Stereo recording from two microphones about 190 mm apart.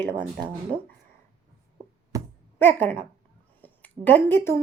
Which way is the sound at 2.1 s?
15° right (ahead or behind).